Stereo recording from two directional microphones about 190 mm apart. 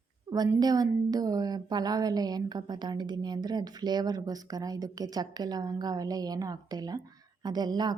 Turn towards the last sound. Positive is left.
turn(degrees=-20)  # may be behind; listen again after turning